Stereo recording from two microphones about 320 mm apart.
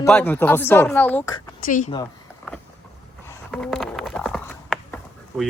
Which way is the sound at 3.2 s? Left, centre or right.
Centre.